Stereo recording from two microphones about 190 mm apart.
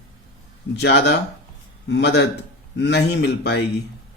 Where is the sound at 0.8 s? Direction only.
60° left (ahead or behind).